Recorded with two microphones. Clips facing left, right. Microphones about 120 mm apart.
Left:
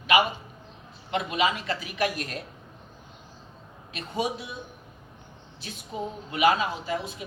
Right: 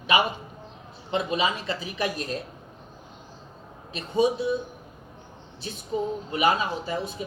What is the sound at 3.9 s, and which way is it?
Speech, 25° right (ahead or behind).